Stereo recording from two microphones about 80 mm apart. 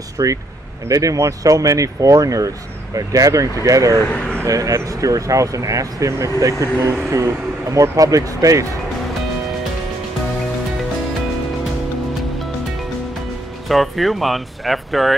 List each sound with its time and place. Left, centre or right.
0.2 s speech: right
4.1 s speech: centre
4.5 s speech: right
13.7 s speech: centre